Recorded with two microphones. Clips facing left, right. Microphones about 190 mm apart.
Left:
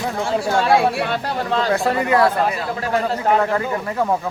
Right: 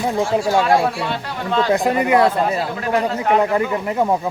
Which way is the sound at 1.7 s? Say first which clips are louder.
Right 3 dB; 15° right (ahead or behind).